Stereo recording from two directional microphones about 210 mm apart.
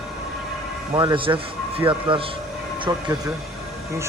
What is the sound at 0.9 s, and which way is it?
Speech, 20° right (ahead or behind).